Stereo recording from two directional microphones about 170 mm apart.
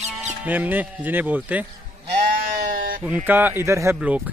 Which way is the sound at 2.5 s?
60° right (ahead or behind).